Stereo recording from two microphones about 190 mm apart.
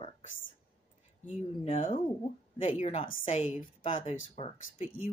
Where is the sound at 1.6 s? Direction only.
30° left (ahead or behind).